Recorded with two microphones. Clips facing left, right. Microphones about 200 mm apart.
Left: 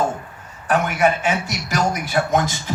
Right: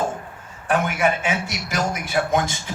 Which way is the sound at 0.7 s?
45° left (ahead or behind).